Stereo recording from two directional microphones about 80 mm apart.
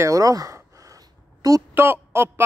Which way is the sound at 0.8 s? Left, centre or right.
Right.